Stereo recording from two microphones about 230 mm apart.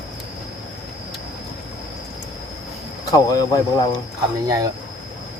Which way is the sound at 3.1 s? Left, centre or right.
Centre.